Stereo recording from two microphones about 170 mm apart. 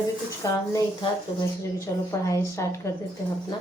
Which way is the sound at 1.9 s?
20° left (ahead or behind).